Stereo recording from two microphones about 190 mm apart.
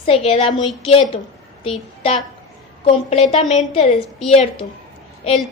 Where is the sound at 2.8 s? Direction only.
30° left (ahead or behind).